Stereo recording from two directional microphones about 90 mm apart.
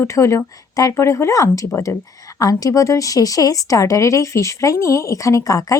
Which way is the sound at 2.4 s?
40° left (ahead or behind).